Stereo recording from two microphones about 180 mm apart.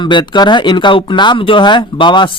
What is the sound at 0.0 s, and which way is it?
A man's voice, 25° left (ahead or behind).